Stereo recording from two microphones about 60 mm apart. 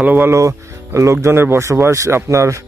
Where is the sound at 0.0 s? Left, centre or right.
Right.